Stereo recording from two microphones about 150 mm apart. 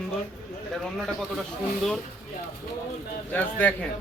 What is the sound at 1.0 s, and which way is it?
Speech, centre (ahead or behind).